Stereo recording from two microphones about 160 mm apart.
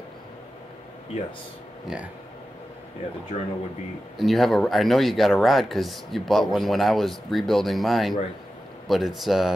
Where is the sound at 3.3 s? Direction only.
55° left (ahead or behind).